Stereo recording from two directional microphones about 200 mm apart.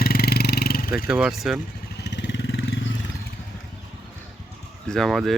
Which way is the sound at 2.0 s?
60° left (ahead or behind).